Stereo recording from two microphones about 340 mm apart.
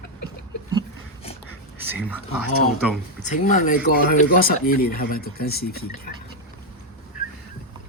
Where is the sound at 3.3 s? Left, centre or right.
Left.